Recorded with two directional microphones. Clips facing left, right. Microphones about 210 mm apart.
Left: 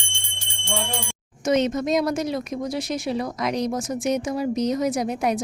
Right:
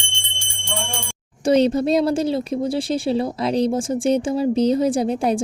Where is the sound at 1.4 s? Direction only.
35° right (ahead or behind).